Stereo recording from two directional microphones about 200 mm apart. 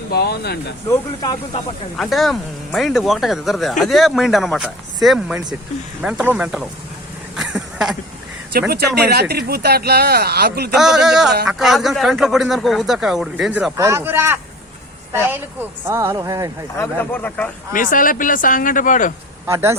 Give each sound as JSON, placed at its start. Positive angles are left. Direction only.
{"t": 0.1, "sound": "speech", "side_deg": 50}
{"t": 0.9, "sound": "speech", "side_deg": 20}
{"t": 2.0, "sound": "speech", "side_deg": 0}
{"t": 7.3, "sound": "a sound", "side_deg": 0}
{"t": 8.7, "sound": "speech", "side_deg": -50}
{"t": 10.8, "sound": "speech", "side_deg": 0}
{"t": 13.7, "sound": "speech", "side_deg": -15}
{"t": 15.8, "sound": "speech", "side_deg": -15}
{"t": 16.7, "sound": "speech", "side_deg": 10}
{"t": 17.7, "sound": "speech", "side_deg": 45}
{"t": 19.5, "sound": "speech", "side_deg": -15}